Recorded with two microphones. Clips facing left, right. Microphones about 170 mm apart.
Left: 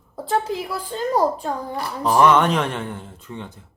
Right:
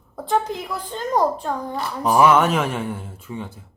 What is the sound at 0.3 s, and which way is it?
A woman's voice, 5° left (ahead or behind).